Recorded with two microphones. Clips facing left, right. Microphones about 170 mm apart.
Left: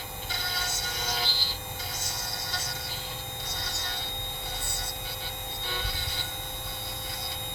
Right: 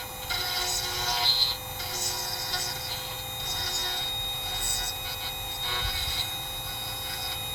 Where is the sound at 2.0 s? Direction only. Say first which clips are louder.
Right 1 dB; 20° right (ahead or behind).